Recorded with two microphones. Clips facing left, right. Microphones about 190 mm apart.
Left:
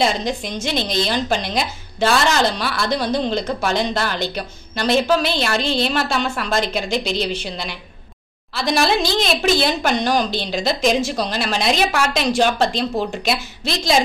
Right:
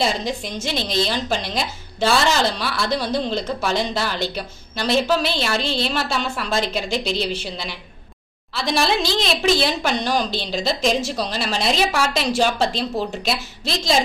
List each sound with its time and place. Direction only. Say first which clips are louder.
0.0 s a woman's voice: left 2 dB; 5° right (ahead or behind)